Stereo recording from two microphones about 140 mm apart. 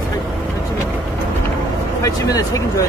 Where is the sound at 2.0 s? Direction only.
25° left (ahead or behind).